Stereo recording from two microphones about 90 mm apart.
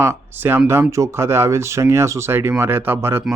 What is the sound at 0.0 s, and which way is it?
Speech, 25° right (ahead or behind).